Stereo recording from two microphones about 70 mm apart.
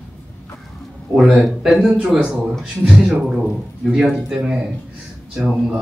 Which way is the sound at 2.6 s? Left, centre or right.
Centre.